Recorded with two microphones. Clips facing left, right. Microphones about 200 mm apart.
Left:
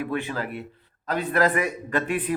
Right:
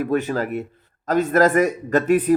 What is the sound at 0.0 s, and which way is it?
Speech, 45° right (ahead or behind).